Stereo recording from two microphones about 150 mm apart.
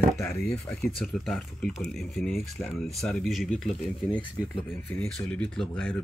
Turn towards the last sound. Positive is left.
turn(degrees=5)  # may be behind; listen again after turning